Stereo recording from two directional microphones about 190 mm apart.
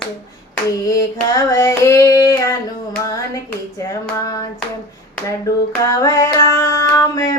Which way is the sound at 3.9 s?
15° left (ahead or behind).